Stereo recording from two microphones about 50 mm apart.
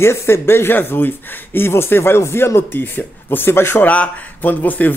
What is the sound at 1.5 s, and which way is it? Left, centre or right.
Speech, left.